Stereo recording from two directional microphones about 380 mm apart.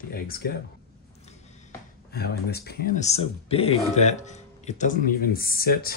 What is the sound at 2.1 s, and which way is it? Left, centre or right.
Speech, left.